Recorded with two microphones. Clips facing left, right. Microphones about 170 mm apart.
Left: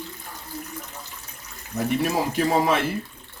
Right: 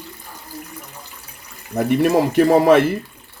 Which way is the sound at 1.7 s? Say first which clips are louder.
Right 8 dB; 55° right (ahead or behind).